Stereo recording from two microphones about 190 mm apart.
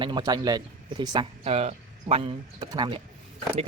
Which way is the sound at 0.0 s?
20° right (ahead or behind).